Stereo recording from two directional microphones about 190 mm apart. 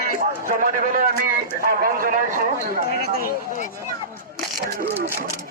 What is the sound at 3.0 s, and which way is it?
Speech, 50° left (ahead or behind).